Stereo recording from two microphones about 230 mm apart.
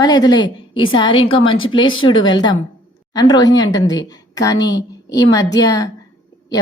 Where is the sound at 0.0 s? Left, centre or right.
Centre.